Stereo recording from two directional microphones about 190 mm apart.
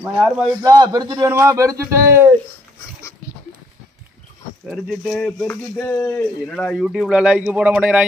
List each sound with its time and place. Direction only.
0.0 s a man's voice: 5° right (ahead or behind)
0.6 s a man's voice: 20° right (ahead or behind)
4.6 s speech: centre (ahead or behind)